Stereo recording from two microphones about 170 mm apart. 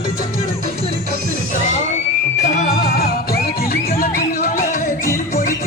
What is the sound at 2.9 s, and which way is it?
Music, 65° left (ahead or behind).